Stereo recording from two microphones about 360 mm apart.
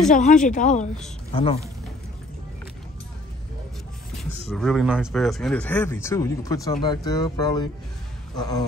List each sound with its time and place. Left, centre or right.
0.1 s speech: left
4.2 s speech: centre